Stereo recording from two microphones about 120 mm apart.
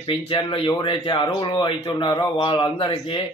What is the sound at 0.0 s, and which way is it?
A man's voice, 45° left (ahead or behind).